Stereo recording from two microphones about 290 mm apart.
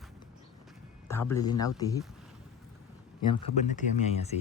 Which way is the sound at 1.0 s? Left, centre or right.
Centre.